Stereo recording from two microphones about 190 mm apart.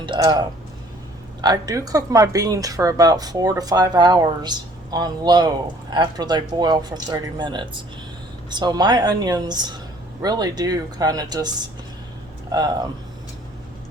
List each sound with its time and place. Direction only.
0.0 s speech: 25° right (ahead or behind)